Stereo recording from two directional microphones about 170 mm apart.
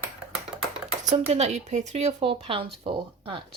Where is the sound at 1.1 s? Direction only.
40° right (ahead or behind).